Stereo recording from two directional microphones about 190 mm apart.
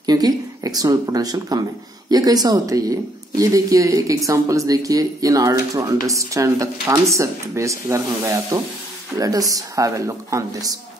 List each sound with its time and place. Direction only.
0.0 s speech: 20° right (ahead or behind)